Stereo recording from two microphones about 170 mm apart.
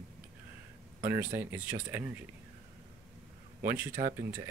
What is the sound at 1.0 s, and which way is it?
Speech, 15° right (ahead or behind).